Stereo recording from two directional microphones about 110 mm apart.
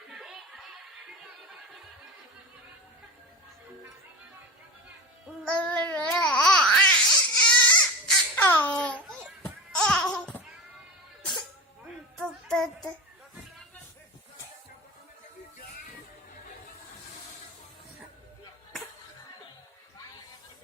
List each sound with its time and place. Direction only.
0.1 s a sound: 5° right (ahead or behind)
5.5 s child singing: 10° left (ahead or behind)
6.1 s baby cry: 10° left (ahead or behind)
8.4 s a sound: 20° left (ahead or behind)
9.4 s babbling: 10° left (ahead or behind)
12.5 s child singing: 5° left (ahead or behind)